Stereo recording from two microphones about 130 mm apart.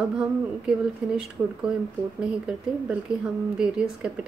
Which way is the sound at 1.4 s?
20° right (ahead or behind).